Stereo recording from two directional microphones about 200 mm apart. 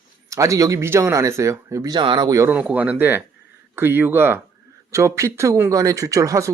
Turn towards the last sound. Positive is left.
turn(degrees=-15)  # may be behind; listen again after turning